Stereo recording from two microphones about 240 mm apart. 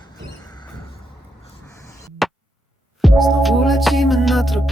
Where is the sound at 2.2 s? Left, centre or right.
Centre.